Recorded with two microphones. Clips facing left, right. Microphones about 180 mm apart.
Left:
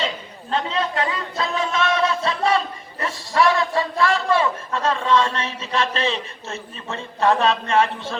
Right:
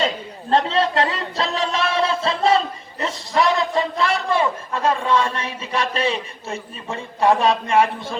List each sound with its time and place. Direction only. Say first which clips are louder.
0.5 s a man's voice: right 5 dB; 35° right (ahead or behind); by 8.1 s 15° right (ahead or behind)